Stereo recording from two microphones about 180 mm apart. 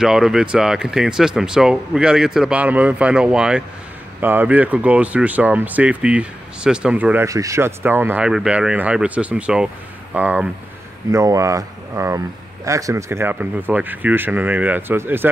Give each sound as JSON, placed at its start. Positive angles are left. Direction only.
{"t": 0.0, "sound": "speech", "side_deg": -5}